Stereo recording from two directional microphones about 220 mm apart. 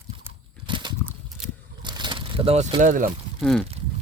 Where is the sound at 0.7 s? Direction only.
20° right (ahead or behind).